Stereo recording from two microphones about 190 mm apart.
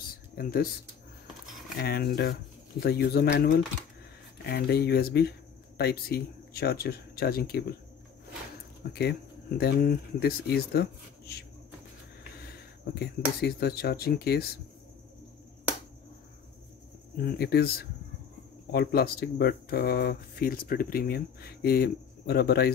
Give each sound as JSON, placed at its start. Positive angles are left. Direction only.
{"t": 0.4, "sound": "speech", "side_deg": 50}
{"t": 1.8, "sound": "speech", "side_deg": 55}
{"t": 9.6, "sound": "speech", "side_deg": 55}
{"t": 13.0, "sound": "speech", "side_deg": 55}
{"t": 17.2, "sound": "speech", "side_deg": 55}